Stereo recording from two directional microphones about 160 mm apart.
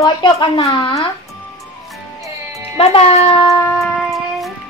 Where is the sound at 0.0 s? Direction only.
30° left (ahead or behind).